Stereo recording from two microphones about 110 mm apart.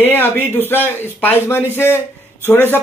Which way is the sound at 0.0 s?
20° left (ahead or behind).